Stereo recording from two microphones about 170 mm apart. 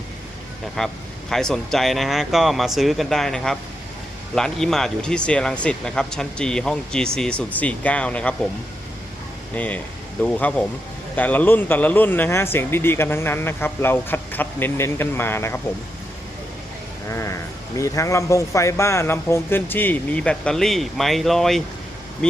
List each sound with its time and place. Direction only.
0.8 s speech: 5° left (ahead or behind)
9.6 s speech: 10° left (ahead or behind)
17.1 s speech: 15° left (ahead or behind)